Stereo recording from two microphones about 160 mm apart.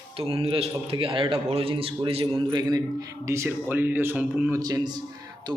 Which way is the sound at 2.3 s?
25° right (ahead or behind).